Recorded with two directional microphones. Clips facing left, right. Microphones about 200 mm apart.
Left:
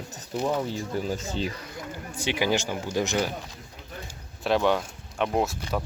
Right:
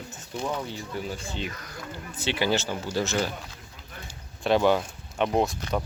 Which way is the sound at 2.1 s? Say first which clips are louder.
Even; 15° left (ahead or behind).